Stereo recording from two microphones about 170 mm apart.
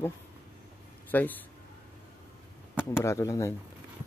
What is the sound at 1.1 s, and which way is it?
Speech, 10° left (ahead or behind).